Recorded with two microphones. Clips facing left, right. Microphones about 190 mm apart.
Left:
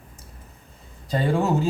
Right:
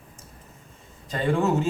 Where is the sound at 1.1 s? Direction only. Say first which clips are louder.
Left 1 dB; 35° left (ahead or behind).